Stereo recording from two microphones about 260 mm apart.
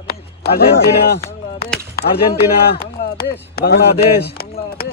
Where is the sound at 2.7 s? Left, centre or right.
Left.